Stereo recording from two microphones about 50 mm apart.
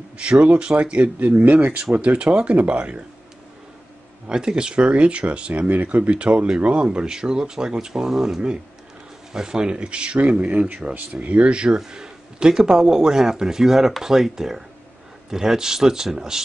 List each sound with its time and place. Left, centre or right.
0.2 s speech: right
4.3 s speech: centre
10.8 s speech: centre
11.1 s speech: right; by 16.4 s centre